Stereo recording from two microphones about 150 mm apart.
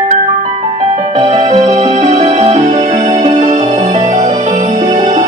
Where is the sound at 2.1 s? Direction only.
45° right (ahead or behind).